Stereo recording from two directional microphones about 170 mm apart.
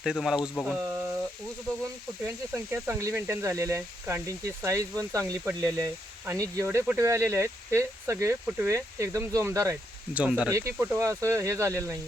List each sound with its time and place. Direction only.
0.0 s speech: centre (ahead or behind)
2.2 s speech: 15° right (ahead or behind)
10.2 s speech: 5° right (ahead or behind)
10.5 s speech: 15° right (ahead or behind)